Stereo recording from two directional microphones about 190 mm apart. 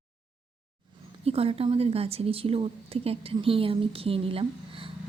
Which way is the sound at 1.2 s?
30° right (ahead or behind).